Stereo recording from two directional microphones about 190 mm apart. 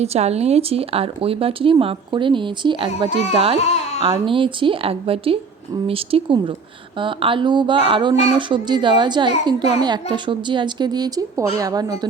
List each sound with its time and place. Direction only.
0.0 s speech: 35° right (ahead or behind); by 11.9 s 20° right (ahead or behind)